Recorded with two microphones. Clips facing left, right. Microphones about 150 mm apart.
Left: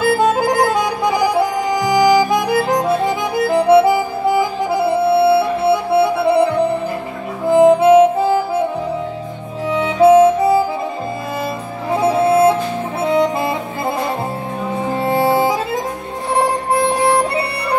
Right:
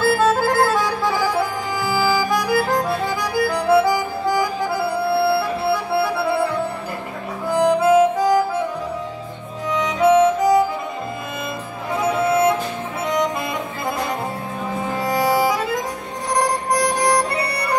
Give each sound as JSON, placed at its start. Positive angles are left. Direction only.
{"t": 0.0, "sound": "music", "side_deg": 20}
{"t": 7.4, "sound": "harmonica", "side_deg": 25}
{"t": 9.7, "sound": "music", "side_deg": 30}
{"t": 11.9, "sound": "music", "side_deg": 30}
{"t": 14.9, "sound": "music", "side_deg": 30}